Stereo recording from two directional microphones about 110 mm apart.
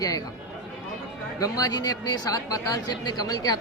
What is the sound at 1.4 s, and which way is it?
Speech, 35° left (ahead or behind).